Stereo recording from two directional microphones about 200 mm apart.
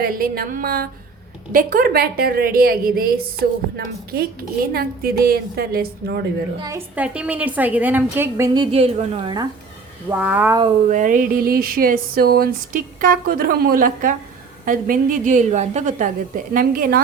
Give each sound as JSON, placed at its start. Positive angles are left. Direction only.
{"t": 0.0, "sound": "a sound", "side_deg": -45}
{"t": 6.6, "sound": "a woman's voice", "side_deg": -15}
{"t": 8.5, "sound": "a woman's voice", "side_deg": -30}
{"t": 10.1, "sound": "a woman's voice", "side_deg": -10}
{"t": 10.8, "sound": "a sound", "side_deg": -40}
{"t": 14.6, "sound": "a woman's voice", "side_deg": -45}